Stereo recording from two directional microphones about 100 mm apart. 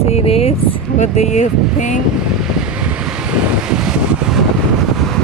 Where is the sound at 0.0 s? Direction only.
90° left.